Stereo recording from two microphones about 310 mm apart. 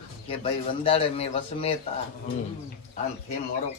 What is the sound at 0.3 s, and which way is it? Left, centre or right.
Speech, centre.